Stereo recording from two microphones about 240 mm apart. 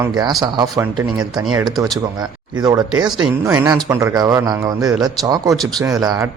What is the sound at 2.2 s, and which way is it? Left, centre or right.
Speech, centre.